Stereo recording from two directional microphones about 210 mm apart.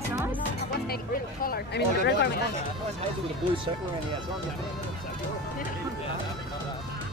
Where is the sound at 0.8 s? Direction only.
45° left (ahead or behind).